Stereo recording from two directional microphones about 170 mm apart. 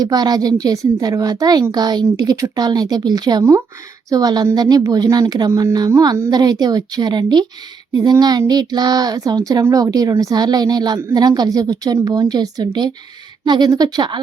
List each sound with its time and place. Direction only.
0.0 s speech: 20° right (ahead or behind)